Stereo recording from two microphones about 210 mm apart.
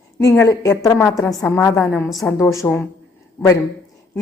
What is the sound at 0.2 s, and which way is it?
A woman's voice, 15° left (ahead or behind).